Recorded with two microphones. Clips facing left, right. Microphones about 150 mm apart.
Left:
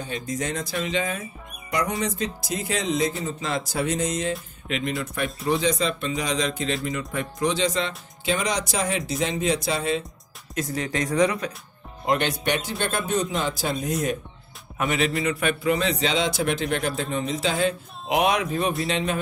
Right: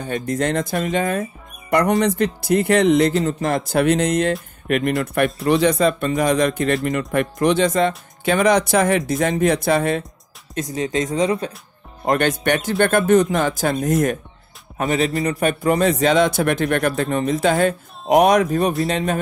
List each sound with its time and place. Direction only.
0.0 s a man's voice: 60° right (ahead or behind)
10.7 s speech: 20° right (ahead or behind)
12.1 s a man's voice: 50° right (ahead or behind)
14.8 s a man's voice: 30° right (ahead or behind)